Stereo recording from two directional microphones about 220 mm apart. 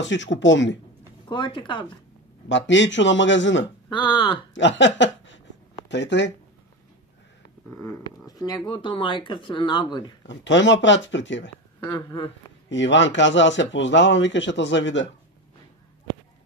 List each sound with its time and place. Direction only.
0.0 s speech: 55° left (ahead or behind)
1.3 s speech: 20° left (ahead or behind)
2.4 s speech: 55° left (ahead or behind)
3.9 s speech: 20° left (ahead or behind)
4.6 s a sound: 55° left (ahead or behind)
5.9 s speech: 55° left (ahead or behind)
7.8 s speech: 15° left (ahead or behind)
10.2 s speech: 55° left (ahead or behind)
11.8 s speech: 20° left (ahead or behind)
12.6 s speech: 55° left (ahead or behind)